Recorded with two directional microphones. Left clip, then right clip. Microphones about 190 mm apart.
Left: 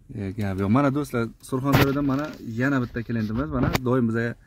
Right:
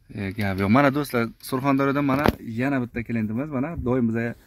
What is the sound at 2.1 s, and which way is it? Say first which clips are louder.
Speech: right 6 dB; 15° right (ahead or behind).